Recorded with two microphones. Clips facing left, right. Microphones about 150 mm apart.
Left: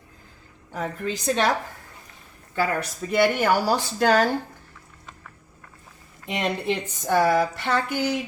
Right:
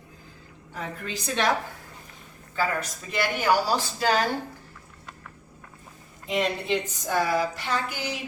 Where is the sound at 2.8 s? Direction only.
60° left (ahead or behind).